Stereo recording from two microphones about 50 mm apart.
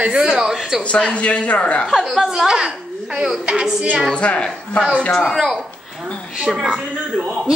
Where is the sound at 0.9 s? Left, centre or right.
Left.